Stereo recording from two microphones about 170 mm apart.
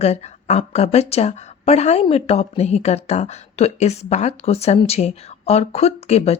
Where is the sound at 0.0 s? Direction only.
40° left (ahead or behind).